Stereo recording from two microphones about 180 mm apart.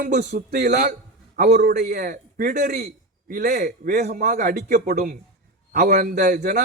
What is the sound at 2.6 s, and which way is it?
Speech, 65° right (ahead or behind).